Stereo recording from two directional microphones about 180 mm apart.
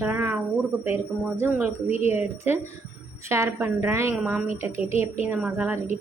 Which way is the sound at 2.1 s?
10° right (ahead or behind).